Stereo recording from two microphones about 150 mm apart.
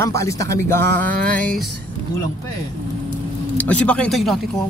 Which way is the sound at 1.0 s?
65° right (ahead or behind).